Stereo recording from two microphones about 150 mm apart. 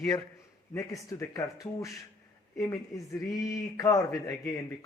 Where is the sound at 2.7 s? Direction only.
20° left (ahead or behind).